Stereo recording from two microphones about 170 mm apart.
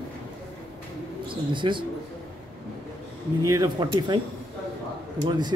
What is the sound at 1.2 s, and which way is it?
Speech, 30° right (ahead or behind).